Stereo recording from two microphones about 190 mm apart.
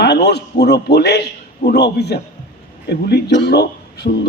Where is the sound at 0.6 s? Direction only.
60° left (ahead or behind).